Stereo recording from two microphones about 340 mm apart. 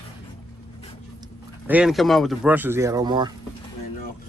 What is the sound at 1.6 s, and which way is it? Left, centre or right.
Speech, centre.